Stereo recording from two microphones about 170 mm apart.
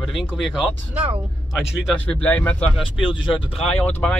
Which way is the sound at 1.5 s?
5° left (ahead or behind).